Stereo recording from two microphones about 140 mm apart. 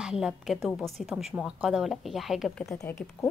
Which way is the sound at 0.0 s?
5° right (ahead or behind).